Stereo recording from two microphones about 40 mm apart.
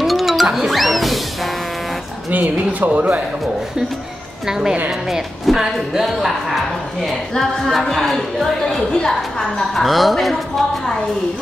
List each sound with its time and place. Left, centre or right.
0.0 s music: centre
2.3 s speech: right
4.5 s a woman's voice: centre
7.3 s a woman's voice: centre
8.9 s a woman's voice: centre
9.6 s speech: centre